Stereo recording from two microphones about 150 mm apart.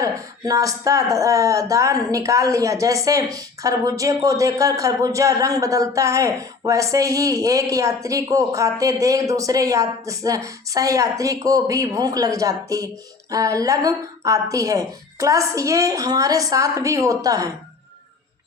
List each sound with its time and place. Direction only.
0.0 s speech: 20° right (ahead or behind)